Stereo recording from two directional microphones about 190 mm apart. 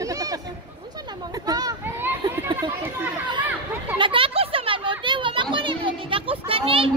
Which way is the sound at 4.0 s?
30° right (ahead or behind).